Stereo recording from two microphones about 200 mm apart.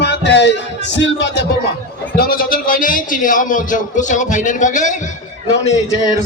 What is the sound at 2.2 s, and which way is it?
A man's voice, 45° left (ahead or behind).